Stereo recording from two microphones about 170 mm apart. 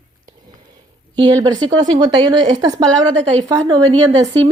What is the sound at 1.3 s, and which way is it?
Speech, 20° right (ahead or behind).